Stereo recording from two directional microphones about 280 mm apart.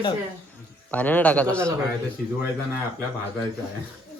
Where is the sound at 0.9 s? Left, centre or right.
Centre.